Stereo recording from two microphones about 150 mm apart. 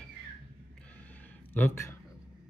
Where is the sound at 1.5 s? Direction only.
15° left (ahead or behind).